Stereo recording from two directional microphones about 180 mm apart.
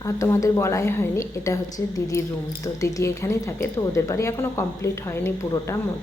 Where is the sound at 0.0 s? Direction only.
20° left (ahead or behind).